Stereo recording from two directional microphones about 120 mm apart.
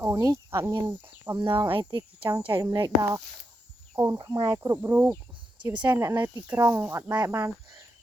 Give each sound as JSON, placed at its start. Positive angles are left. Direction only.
{"t": 0.0, "sound": "speech", "side_deg": -25}
{"t": 1.4, "sound": "speech", "side_deg": -40}
{"t": 2.5, "sound": "speech", "side_deg": -25}
{"t": 4.2, "sound": "speech", "side_deg": -40}
{"t": 4.4, "sound": "speech", "side_deg": -25}
{"t": 4.8, "sound": "speech", "side_deg": -15}
{"t": 7.1, "sound": "speech", "side_deg": -35}